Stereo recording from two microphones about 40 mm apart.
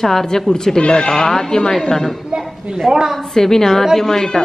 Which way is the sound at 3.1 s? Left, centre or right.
Centre.